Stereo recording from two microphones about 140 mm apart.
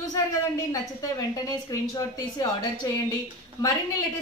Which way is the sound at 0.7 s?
25° left (ahead or behind).